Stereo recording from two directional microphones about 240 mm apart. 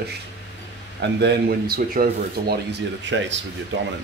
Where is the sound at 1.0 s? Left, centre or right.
Right.